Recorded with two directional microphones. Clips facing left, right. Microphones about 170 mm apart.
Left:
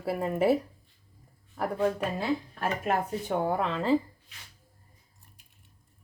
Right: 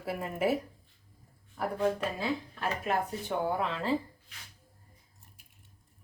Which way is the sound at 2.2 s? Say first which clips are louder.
Left 4 dB; 45° left (ahead or behind).